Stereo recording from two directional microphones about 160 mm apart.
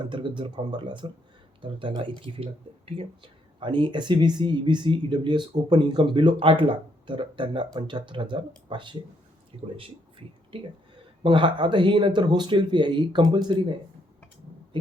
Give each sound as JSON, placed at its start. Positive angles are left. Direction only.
{"t": 0.0, "sound": "speech", "side_deg": -30}
{"t": 9.7, "sound": "a sound", "side_deg": -35}
{"t": 11.2, "sound": "speech", "side_deg": -30}